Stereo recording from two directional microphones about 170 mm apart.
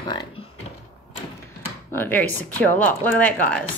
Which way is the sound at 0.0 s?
25° left (ahead or behind).